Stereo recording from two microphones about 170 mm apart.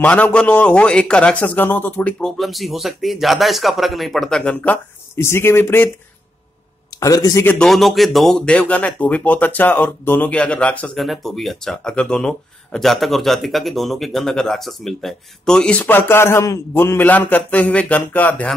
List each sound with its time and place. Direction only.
0.0 s a man's voice: 10° left (ahead or behind)
6.9 s speech: 20° left (ahead or behind)
7.5 s speech: centre (ahead or behind)